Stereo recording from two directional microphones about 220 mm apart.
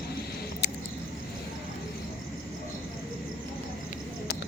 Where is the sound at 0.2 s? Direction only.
45° left (ahead or behind).